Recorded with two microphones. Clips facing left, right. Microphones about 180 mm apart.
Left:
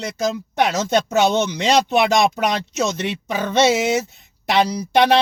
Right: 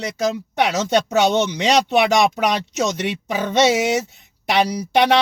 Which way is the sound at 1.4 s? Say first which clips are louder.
Even; 15° right (ahead or behind).